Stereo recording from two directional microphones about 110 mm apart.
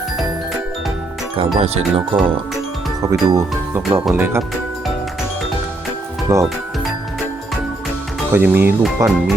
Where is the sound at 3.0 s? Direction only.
30° right (ahead or behind).